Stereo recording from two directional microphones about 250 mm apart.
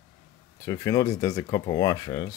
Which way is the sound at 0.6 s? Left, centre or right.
Centre.